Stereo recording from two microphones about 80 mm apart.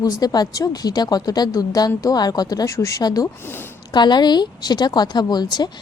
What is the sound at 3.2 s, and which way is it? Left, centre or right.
Speech, left.